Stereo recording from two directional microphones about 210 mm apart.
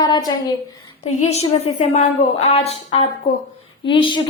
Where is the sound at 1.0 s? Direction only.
30° left (ahead or behind).